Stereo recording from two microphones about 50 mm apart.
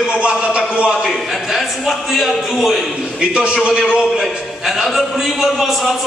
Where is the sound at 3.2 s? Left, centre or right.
Centre.